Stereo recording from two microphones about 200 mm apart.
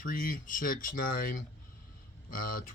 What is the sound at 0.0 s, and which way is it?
Speech, 45° left (ahead or behind).